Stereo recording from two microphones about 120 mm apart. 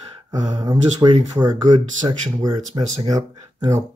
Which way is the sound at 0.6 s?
40° right (ahead or behind).